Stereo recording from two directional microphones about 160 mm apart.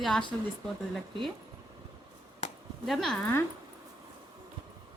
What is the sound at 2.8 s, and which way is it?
Speech, centre (ahead or behind).